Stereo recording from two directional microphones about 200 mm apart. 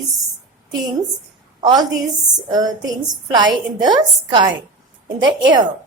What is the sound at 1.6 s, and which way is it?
A woman's voice, 20° right (ahead or behind).